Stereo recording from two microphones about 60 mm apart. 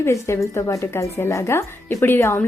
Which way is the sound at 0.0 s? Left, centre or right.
Left.